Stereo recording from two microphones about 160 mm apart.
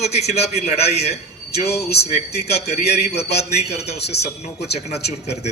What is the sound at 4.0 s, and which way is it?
Speech, 90° left.